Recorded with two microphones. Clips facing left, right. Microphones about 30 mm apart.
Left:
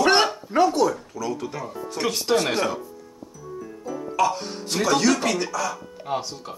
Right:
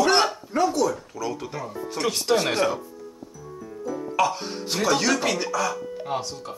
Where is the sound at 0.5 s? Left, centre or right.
Left.